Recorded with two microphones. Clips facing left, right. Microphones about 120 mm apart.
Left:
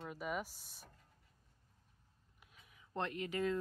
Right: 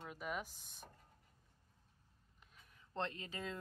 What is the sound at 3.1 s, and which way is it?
Speech, 20° right (ahead or behind).